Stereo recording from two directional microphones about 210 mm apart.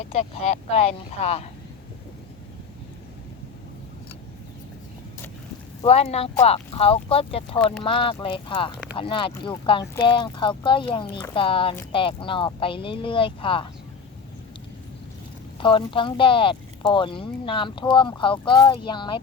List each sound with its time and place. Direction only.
0.1 s speech: 30° left (ahead or behind)
5.8 s speech: 30° left (ahead or behind)
7.6 s speech: 5° left (ahead or behind)
7.9 s speech: 25° left (ahead or behind)
15.5 s speech: 25° left (ahead or behind)